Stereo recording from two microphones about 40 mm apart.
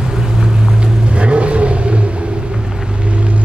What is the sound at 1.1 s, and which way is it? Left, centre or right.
Vehicle, right.